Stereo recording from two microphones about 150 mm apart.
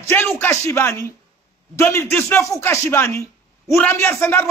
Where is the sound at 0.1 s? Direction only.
15° left (ahead or behind).